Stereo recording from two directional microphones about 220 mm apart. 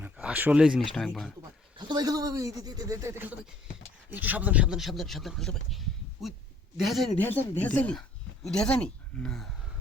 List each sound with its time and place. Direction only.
0.0 s a sound: 5° right (ahead or behind)
0.9 s speech: centre (ahead or behind)
1.9 s speech: 15° right (ahead or behind); by 9.5 s 5° left (ahead or behind)